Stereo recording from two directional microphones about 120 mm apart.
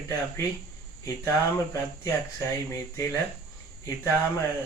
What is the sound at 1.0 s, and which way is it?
Speech, 25° left (ahead or behind).